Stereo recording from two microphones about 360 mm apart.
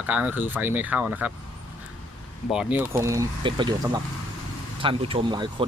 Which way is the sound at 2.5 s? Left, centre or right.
Centre.